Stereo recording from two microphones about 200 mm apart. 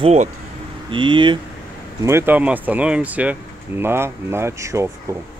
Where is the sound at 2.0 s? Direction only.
10° right (ahead or behind).